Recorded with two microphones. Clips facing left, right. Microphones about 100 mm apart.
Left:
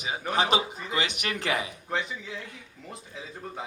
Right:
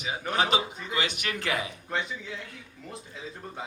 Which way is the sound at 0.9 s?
20° left (ahead or behind).